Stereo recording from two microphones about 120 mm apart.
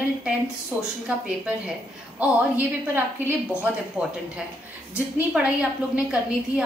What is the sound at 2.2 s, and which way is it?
A woman's voice, 15° right (ahead or behind).